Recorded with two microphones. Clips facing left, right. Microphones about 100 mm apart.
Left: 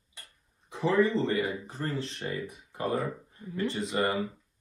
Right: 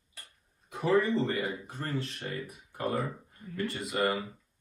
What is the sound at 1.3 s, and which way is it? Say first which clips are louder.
Speech: left 3 dB; 30° left (ahead or behind).